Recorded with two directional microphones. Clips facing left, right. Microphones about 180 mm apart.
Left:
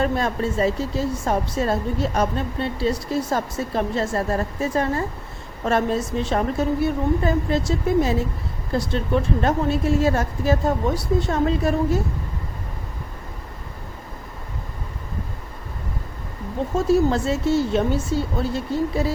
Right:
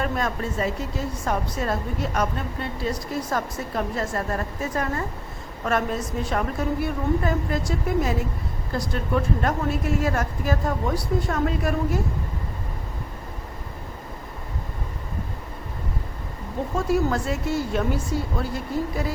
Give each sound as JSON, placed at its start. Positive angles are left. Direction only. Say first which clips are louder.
{"t": 0.0, "sound": "a woman's voice", "louder": "left 4 dB", "side_deg": 30}
{"t": 16.8, "sound": "a woman's voice", "louder": "left 5 dB", "side_deg": 25}